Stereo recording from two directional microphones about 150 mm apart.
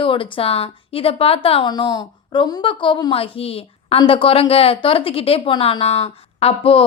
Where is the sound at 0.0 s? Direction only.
35° left (ahead or behind).